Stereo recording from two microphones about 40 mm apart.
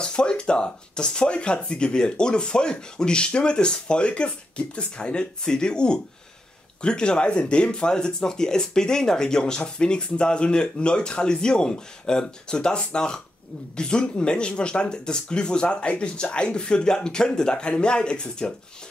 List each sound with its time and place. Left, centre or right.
0.0 s speech: left